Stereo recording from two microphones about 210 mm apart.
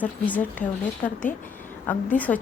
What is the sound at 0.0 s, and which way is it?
A woman's voice, 5° left (ahead or behind).